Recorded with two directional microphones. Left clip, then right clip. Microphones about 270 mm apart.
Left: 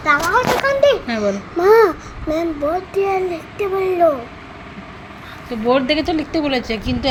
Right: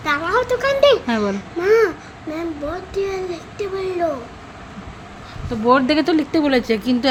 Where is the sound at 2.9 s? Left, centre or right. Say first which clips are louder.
Left 2 dB; centre.